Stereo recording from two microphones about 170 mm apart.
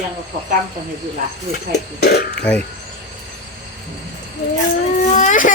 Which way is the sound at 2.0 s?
70° left (ahead or behind).